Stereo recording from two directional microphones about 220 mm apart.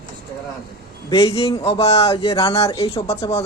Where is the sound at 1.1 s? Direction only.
25° left (ahead or behind).